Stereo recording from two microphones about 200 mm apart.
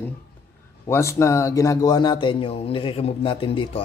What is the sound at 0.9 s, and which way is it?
Speech, 15° left (ahead or behind).